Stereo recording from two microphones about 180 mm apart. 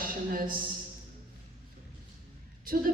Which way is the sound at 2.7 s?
50° right (ahead or behind).